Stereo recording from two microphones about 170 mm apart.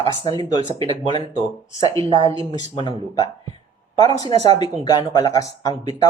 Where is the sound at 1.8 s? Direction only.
20° left (ahead or behind).